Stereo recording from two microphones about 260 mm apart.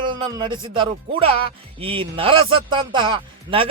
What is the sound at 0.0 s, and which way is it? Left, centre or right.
Speech, centre.